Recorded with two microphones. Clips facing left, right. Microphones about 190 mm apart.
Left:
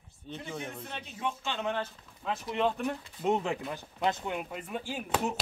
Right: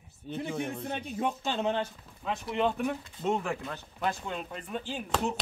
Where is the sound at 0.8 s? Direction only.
45° right (ahead or behind).